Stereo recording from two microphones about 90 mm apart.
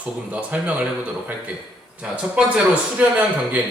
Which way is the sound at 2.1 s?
15° right (ahead or behind).